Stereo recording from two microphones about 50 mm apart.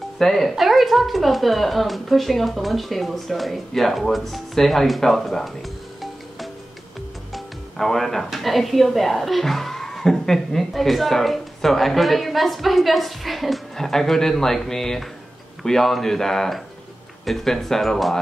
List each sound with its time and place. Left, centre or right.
0.2 s a woman's voice: centre
7.7 s a woman's voice: centre